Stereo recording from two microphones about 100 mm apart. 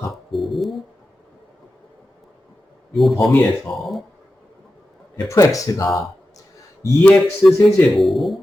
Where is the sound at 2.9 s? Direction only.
Centre (ahead or behind).